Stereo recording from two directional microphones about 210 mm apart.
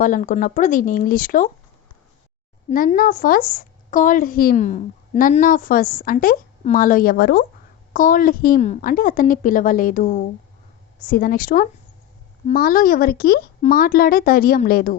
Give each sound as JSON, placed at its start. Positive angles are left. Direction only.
{"t": 0.0, "sound": "a woman's voice", "side_deg": 40}
{"t": 2.6, "sound": "a woman's voice", "side_deg": 40}